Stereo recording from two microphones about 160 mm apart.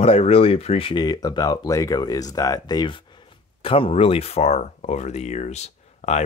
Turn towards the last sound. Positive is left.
turn(degrees=45)  # may be behind; listen again after turning